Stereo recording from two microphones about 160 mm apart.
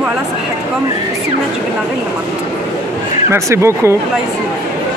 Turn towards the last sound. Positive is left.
turn(degrees=-15)  # may be behind; listen again after turning